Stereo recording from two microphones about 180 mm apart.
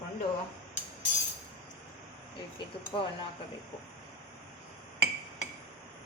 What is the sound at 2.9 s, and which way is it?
Speech, 25° left (ahead or behind).